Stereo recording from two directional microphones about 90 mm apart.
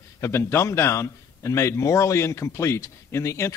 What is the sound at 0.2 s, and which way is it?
A man's voice, 30° left (ahead or behind).